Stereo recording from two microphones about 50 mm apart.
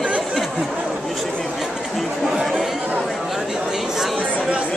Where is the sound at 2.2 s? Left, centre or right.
Centre.